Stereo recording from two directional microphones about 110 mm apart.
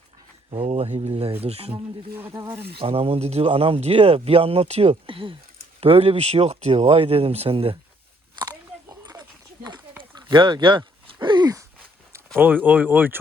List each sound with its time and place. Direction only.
0.5 s speech: 60° right (ahead or behind)
2.1 s speech: 25° right (ahead or behind)
2.8 s speech: 60° right (ahead or behind)
5.8 s speech: 65° right (ahead or behind)
8.4 s biting: 40° right (ahead or behind)
10.0 s a sound: 45° right (ahead or behind)
12.4 s speech: 15° right (ahead or behind)